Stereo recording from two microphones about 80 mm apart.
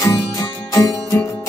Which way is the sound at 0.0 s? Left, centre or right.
Left.